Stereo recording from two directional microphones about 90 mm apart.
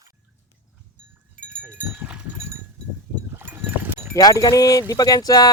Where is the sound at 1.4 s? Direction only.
10° left (ahead or behind).